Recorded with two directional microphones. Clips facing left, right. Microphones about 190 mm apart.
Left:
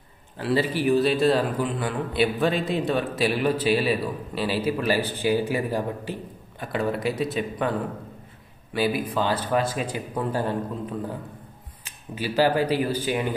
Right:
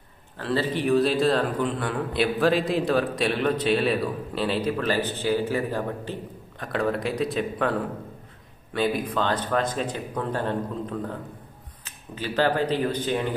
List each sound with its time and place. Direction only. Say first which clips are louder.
0.4 s a man's voice: left 2 dB; 10° left (ahead or behind)
6.6 s a man's voice: even; centre (ahead or behind)
8.7 s speech: left 1 dB; 5° left (ahead or behind)